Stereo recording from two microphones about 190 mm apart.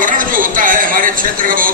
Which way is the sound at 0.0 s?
45° right (ahead or behind).